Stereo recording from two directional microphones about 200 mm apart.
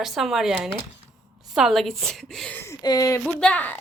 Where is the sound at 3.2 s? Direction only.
5° left (ahead or behind).